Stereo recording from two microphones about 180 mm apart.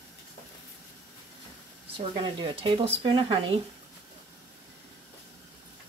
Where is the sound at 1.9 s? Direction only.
30° right (ahead or behind).